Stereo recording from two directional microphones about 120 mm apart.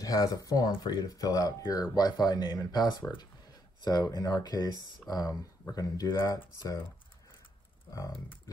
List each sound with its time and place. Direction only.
0.0 s speech: 30° left (ahead or behind)